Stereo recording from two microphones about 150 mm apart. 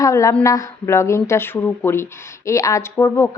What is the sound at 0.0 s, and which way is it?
A woman's voice, 20° left (ahead or behind).